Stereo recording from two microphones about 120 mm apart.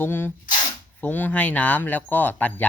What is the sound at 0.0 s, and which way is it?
Speech, 15° left (ahead or behind).